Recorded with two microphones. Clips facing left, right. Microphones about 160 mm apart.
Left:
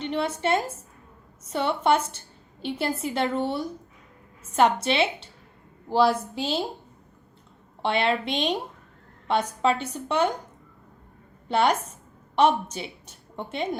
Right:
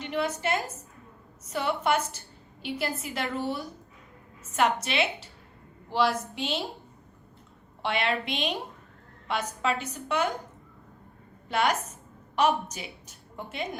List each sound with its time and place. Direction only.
0.0 s a sound: 30° left (ahead or behind)
1.5 s a woman's voice: 30° left (ahead or behind)
7.8 s a woman's voice: 30° left (ahead or behind)
11.4 s a woman's voice: 30° left (ahead or behind)